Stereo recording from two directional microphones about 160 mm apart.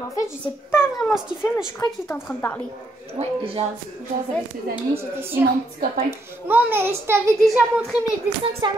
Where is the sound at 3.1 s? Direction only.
35° right (ahead or behind).